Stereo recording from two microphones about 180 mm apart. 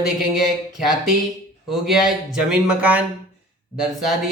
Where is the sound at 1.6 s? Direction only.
Centre (ahead or behind).